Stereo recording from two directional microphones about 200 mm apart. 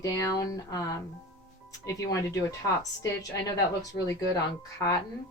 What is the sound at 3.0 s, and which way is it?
A woman's voice, 15° left (ahead or behind).